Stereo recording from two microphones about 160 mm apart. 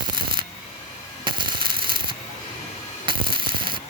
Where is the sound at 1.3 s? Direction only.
30° right (ahead or behind).